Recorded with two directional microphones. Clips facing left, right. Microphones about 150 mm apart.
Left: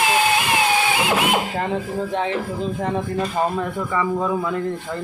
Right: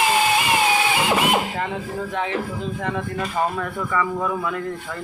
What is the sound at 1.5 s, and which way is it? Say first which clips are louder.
Speech: left 3 dB; 35° left (ahead or behind).